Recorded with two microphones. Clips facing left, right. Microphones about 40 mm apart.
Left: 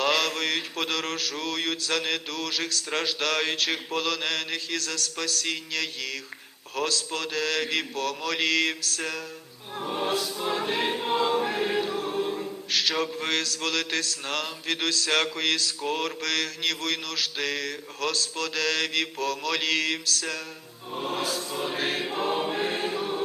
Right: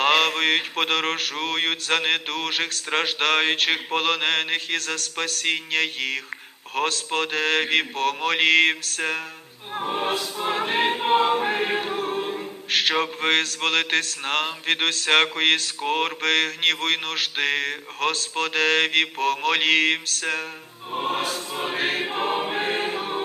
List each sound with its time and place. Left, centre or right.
0.0 s choir: right